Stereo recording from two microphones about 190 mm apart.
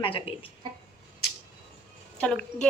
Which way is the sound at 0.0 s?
30° left (ahead or behind).